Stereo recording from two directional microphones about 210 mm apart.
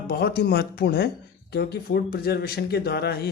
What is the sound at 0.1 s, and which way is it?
Speech, 50° left (ahead or behind).